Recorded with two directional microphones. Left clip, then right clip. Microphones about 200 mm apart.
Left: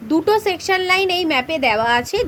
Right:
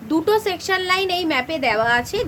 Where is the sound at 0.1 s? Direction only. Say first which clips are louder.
Left 2 dB; 15° left (ahead or behind).